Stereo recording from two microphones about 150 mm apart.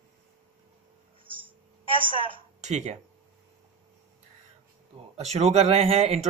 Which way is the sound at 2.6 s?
50° right (ahead or behind).